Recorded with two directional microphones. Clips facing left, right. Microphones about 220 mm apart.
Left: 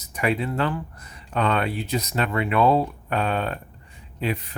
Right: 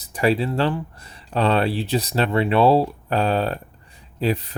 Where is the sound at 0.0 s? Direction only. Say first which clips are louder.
Right 4 dB; 30° right (ahead or behind).